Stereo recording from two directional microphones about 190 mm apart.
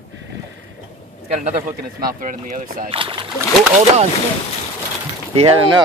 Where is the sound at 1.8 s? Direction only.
50° right (ahead or behind).